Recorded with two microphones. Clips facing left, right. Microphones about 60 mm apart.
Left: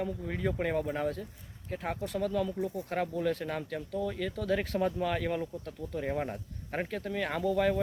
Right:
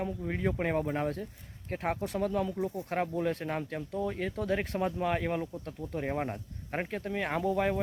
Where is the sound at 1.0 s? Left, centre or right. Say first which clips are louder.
Even; right.